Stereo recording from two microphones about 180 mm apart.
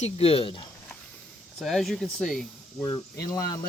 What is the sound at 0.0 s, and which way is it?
Speech, 35° left (ahead or behind).